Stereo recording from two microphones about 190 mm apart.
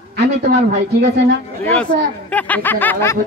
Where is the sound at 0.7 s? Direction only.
60° right (ahead or behind).